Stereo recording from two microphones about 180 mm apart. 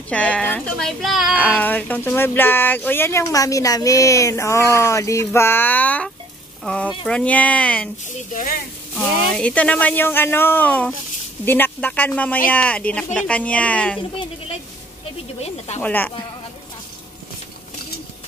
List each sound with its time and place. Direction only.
0.1 s speech: 5° left (ahead or behind)
1.6 s speech: 10° left (ahead or behind)
8.3 s speech: 45° left (ahead or behind)
8.9 s speech: 5° left (ahead or behind)
15.8 s speech: 10° left (ahead or behind)